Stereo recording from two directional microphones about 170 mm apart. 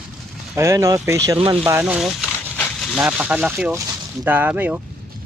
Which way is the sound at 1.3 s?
30° right (ahead or behind).